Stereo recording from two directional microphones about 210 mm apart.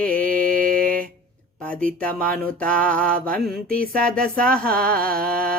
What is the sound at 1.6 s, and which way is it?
Speech, 5° left (ahead or behind).